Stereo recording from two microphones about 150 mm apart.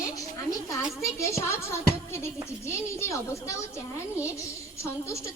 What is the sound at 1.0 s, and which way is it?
A child's voice, 20° left (ahead or behind).